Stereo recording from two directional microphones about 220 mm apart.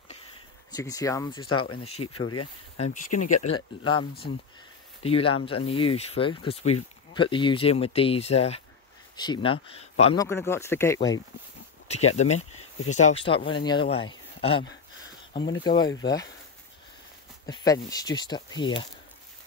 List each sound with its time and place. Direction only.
0.7 s speech: 15° left (ahead or behind)
2.2 s speech: 90° left
2.8 s speech: 35° left (ahead or behind)
3.5 s speech: 20° left (ahead or behind)
5.0 s speech: 25° left (ahead or behind)
10.1 s speech: 10° left (ahead or behind)
11.9 s speech: 30° left (ahead or behind)
12.4 s speech: 80° left
12.9 s speech: 30° left (ahead or behind)
17.5 s speech: 15° left (ahead or behind)